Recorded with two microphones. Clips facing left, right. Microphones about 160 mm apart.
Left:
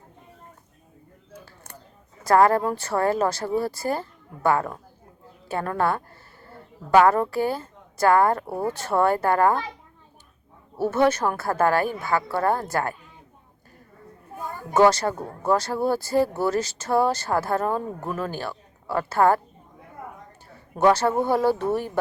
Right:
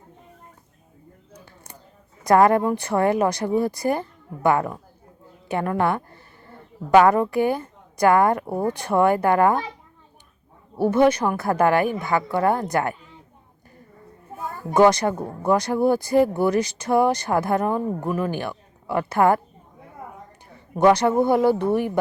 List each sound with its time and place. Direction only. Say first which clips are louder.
2.2 s speech: right 2 dB; 20° right (ahead or behind)
10.8 s speech: right 3 dB; 15° right (ahead or behind)
14.7 s speech: right 2 dB; 15° right (ahead or behind)
20.7 s speech: right 3 dB; 15° right (ahead or behind)